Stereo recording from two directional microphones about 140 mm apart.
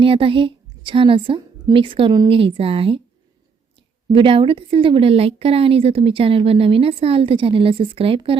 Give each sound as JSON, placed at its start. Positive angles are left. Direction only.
{"t": 0.0, "sound": "a woman's voice", "side_deg": -40}
{"t": 4.1, "sound": "a woman's voice", "side_deg": -40}